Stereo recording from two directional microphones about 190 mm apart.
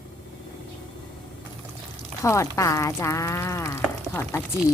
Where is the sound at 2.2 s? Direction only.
15° left (ahead or behind).